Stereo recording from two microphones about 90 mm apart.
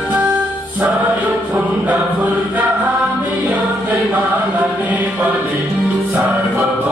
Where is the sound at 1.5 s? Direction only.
15° right (ahead or behind).